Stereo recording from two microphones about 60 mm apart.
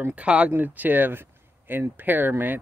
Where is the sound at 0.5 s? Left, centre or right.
Right.